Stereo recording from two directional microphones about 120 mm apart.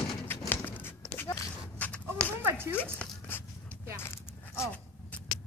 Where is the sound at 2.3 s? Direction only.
20° right (ahead or behind).